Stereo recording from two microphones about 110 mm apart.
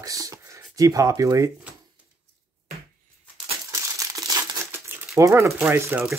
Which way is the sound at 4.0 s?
35° right (ahead or behind).